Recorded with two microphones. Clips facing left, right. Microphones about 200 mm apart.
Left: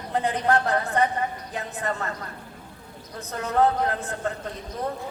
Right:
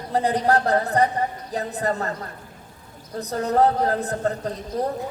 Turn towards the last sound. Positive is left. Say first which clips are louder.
# right 5 dB
turn(degrees=-35)  # may be behind; listen again after turning